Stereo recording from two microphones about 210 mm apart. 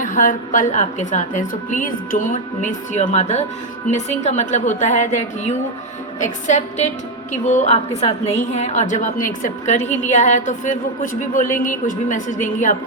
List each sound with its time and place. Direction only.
0.0 s a woman's voice: 40° left (ahead or behind)